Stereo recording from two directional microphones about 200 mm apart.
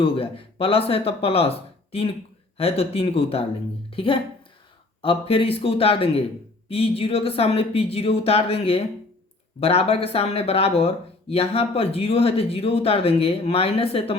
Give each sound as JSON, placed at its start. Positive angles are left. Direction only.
{"t": 0.0, "sound": "speech", "side_deg": 25}